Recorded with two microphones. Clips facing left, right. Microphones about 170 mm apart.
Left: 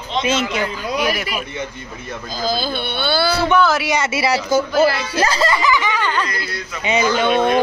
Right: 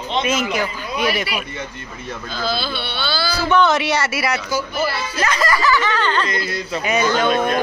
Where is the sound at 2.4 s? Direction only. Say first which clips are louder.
Left 3 dB; 45° left (ahead or behind).